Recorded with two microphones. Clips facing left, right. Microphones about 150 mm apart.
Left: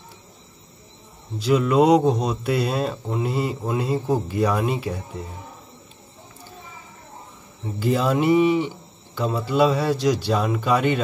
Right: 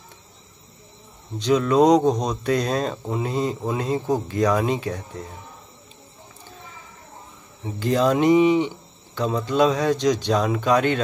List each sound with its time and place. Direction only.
1.4 s speech: 5° left (ahead or behind)
7.8 s speech: 5° left (ahead or behind)
8.3 s speech: 15° right (ahead or behind)
8.5 s speech: 10° left (ahead or behind)